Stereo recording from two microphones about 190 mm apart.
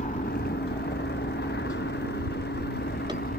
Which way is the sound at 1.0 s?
60° left (ahead or behind).